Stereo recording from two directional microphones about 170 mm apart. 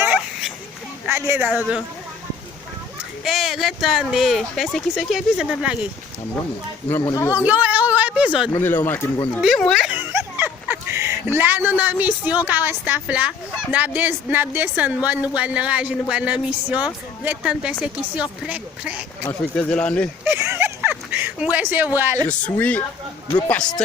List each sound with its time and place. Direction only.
0.0 s children playing: 5° right (ahead or behind)
1.0 s speech: 15° right (ahead or behind)
1.5 s speech: 5° right (ahead or behind)
3.2 s speech: centre (ahead or behind)
6.9 s speech: 15° left (ahead or behind)
7.3 s speech: 10° right (ahead or behind)
8.5 s speech: 10° left (ahead or behind)
9.4 s a sound: centre (ahead or behind); by 11.2 s 15° right (ahead or behind)
11.3 s speech: 10° right (ahead or behind)
19.5 s speech: 5° left (ahead or behind)
20.2 s a sound: 15° right (ahead or behind)
21.9 s speech: 15° right (ahead or behind)
22.3 s speech: 10° left (ahead or behind)